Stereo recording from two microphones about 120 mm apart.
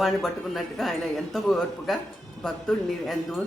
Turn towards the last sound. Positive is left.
turn(degrees=0)  # may be behind; listen again after turning